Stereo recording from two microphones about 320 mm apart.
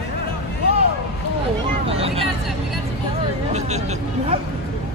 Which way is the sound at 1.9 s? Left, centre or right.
Centre.